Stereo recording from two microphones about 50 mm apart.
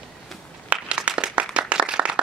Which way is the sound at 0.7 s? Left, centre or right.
Right.